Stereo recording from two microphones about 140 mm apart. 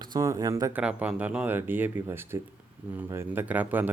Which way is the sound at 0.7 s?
10° right (ahead or behind).